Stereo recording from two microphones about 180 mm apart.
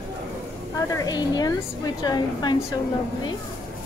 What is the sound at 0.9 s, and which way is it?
A woman's voice, 20° left (ahead or behind).